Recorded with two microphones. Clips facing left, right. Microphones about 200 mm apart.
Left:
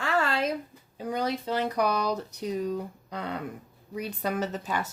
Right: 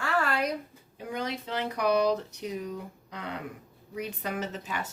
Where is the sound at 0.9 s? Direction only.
35° left (ahead or behind).